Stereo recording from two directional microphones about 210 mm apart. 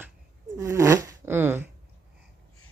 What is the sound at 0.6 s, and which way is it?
Zipper, 15° right (ahead or behind).